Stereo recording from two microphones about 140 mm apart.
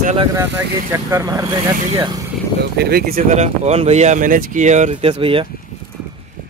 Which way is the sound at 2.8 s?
90° right.